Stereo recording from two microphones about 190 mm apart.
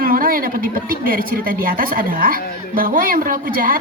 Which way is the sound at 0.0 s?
50° right (ahead or behind).